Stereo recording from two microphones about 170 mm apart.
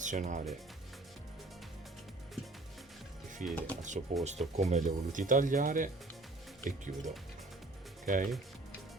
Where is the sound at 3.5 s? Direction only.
10° left (ahead or behind).